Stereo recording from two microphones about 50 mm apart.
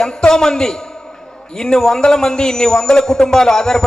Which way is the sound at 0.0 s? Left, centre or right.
Centre.